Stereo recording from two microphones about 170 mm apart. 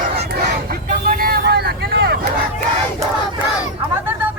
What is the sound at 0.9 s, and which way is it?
Vehicle, 60° right (ahead or behind).